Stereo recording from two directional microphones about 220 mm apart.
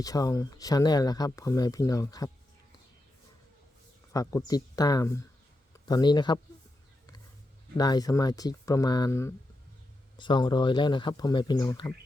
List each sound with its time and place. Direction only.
0.0 s speech: 15° left (ahead or behind)
4.1 s speech: 15° left (ahead or behind)
7.8 s speech: 15° left (ahead or behind)